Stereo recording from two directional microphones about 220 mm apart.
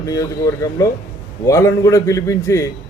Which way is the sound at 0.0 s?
15° left (ahead or behind).